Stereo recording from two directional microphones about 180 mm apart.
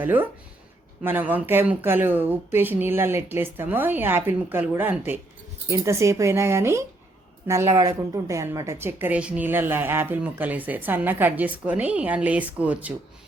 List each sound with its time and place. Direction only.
0.0 s a woman's voice: 10° right (ahead or behind)